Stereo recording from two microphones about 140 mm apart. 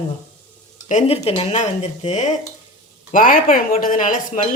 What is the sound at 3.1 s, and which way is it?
Speech, 75° left (ahead or behind).